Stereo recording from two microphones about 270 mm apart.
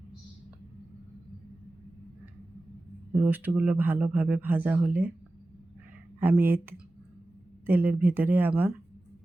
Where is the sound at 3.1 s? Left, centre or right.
Centre.